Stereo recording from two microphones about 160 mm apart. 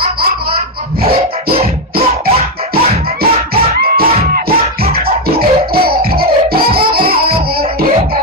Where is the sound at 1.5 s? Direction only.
35° right (ahead or behind).